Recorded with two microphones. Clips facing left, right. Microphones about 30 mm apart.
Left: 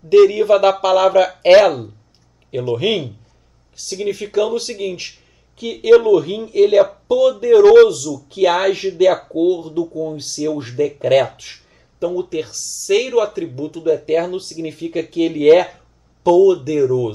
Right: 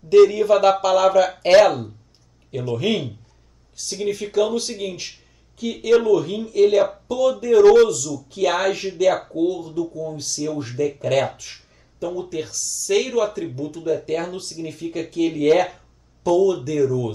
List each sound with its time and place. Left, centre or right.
0.1 s speech: centre